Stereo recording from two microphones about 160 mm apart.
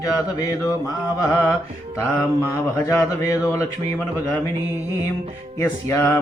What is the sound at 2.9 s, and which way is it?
Speech, 20° left (ahead or behind).